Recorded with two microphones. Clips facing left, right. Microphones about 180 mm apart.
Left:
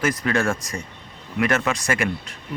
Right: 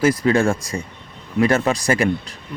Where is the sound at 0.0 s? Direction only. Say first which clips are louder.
Right 6 dB; 30° right (ahead or behind).